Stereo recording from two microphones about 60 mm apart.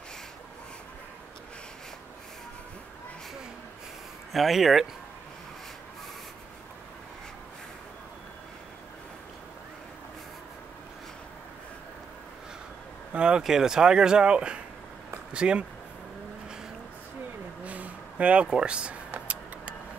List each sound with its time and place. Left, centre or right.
4.3 s speech: centre
13.1 s speech: centre
17.6 s a sound: right
19.1 s vehicle: right